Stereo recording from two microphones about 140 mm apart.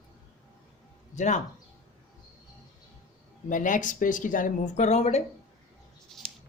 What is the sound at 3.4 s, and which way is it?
A woman's voice, 65° left (ahead or behind).